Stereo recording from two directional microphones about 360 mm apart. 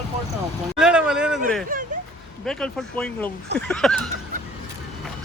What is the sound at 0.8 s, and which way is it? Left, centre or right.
Speech, centre.